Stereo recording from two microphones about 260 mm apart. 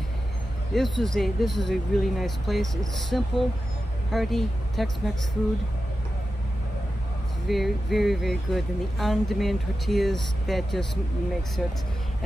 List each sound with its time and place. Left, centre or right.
0.7 s speech: centre
7.4 s speech: centre